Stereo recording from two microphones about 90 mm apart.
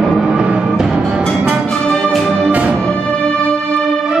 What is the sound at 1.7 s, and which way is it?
Music, 10° left (ahead or behind).